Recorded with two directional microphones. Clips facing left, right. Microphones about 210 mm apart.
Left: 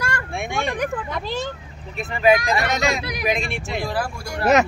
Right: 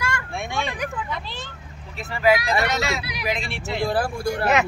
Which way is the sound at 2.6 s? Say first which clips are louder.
Left 2 dB; 45° left (ahead or behind).